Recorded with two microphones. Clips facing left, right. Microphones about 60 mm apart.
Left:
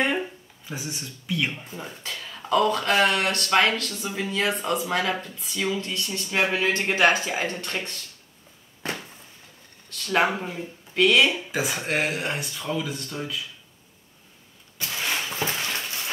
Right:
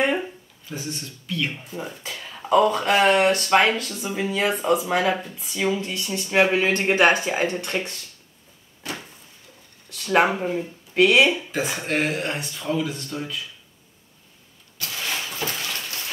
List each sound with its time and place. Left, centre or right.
0.7 s speech: centre
1.8 s speech: centre
8.8 s a sound: left
9.8 s speech: centre
11.5 s speech: centre
14.8 s a sound: left